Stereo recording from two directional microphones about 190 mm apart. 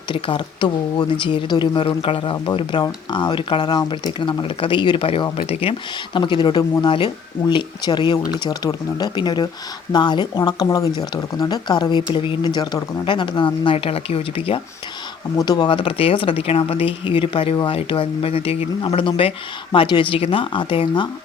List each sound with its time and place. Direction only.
0.1 s speech: 25° left (ahead or behind)